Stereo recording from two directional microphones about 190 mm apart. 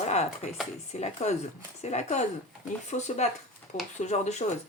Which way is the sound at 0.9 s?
35° left (ahead or behind).